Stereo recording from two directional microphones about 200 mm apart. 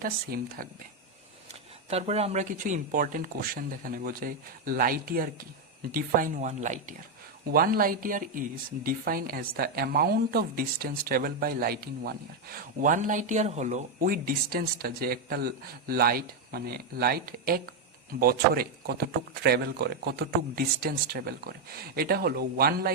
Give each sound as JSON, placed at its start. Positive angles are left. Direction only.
{"t": 0.0, "sound": "speech", "side_deg": -45}
{"t": 1.9, "sound": "speech", "side_deg": -30}